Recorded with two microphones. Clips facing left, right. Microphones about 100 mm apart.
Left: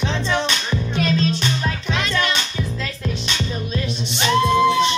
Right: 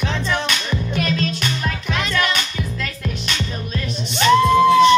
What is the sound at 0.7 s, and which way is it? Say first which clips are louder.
Music: left 1 dB; 30° left (ahead or behind).